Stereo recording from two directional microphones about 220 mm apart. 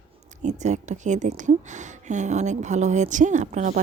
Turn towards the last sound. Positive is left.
turn(degrees=-35)  # may be behind; listen again after turning